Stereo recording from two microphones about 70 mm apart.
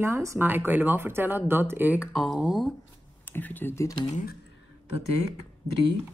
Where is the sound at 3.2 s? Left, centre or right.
Left.